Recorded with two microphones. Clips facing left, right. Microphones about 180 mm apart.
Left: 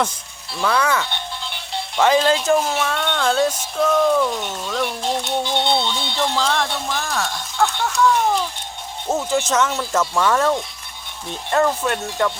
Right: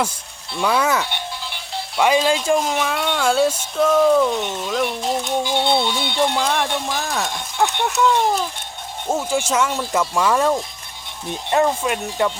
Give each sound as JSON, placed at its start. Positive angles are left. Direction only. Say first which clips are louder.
{"t": 0.5, "sound": "speech", "louder": "right 1 dB", "side_deg": 0}
{"t": 0.8, "sound": "speech", "louder": "right 1 dB", "side_deg": -20}
{"t": 1.5, "sound": "speech", "louder": "left 1 dB", "side_deg": 0}
{"t": 9.0, "sound": "speech", "louder": "left 1 dB", "side_deg": -10}